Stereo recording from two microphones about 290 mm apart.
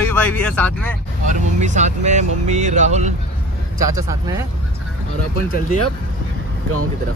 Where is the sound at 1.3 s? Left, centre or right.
Right.